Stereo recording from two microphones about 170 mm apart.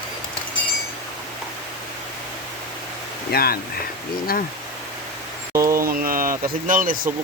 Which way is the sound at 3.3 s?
65° left (ahead or behind).